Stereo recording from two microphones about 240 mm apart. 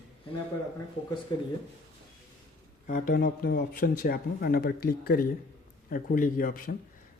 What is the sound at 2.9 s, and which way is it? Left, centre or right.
Speech, left.